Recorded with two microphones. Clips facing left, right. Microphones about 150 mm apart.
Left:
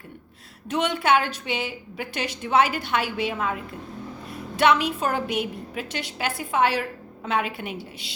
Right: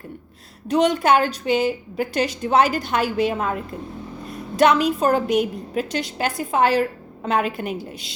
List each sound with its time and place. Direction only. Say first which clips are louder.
0.7 s a woman's voice: right 5 dB; 40° right (ahead or behind)